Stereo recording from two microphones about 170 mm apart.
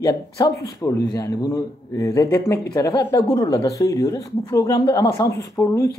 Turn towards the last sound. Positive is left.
turn(degrees=15)  # may be behind; listen again after turning